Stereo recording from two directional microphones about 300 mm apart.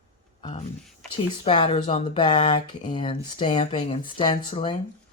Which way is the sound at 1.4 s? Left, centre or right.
Centre.